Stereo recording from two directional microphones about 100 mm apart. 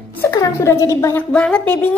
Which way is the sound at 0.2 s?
25° left (ahead or behind).